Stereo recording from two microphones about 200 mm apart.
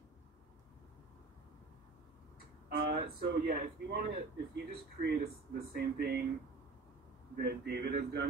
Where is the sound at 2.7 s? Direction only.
55° right (ahead or behind).